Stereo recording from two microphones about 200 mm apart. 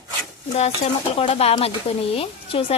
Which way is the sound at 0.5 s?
35° left (ahead or behind).